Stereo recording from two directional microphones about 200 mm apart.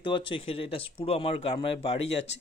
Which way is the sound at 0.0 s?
25° left (ahead or behind).